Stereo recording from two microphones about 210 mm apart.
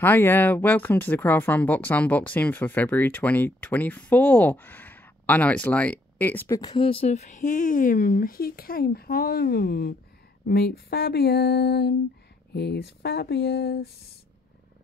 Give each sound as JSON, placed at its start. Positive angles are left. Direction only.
{"t": 0.0, "sound": "speech", "side_deg": 10}
{"t": 6.7, "sound": "speech", "side_deg": 25}